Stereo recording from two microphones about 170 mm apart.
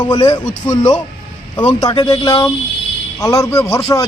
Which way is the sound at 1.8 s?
25° left (ahead or behind).